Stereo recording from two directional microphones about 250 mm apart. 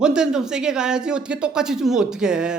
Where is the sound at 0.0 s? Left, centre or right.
Centre.